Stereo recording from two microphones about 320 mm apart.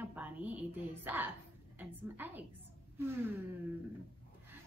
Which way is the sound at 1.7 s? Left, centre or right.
Centre.